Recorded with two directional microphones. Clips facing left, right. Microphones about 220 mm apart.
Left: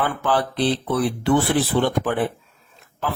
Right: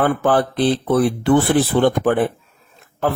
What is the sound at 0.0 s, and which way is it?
Speech, 50° right (ahead or behind).